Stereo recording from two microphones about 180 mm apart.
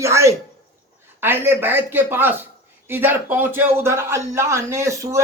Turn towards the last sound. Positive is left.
turn(degrees=-15)  # may be behind; listen again after turning